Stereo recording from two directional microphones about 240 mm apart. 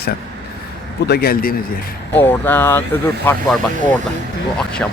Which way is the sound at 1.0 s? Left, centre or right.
Left.